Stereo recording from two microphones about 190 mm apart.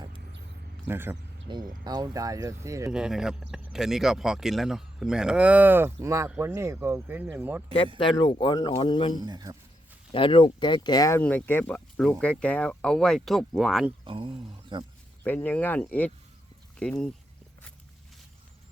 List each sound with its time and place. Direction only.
0.9 s a man's voice: 10° right (ahead or behind)
2.9 s a man's voice: 5° right (ahead or behind)
7.9 s speech: 25° left (ahead or behind)
9.1 s speech: 20° right (ahead or behind)
10.1 s speech: 25° left (ahead or behind)
11.2 s speech: 10° left (ahead or behind)
14.0 s speech: 25° right (ahead or behind)
15.2 s speech: 10° left (ahead or behind)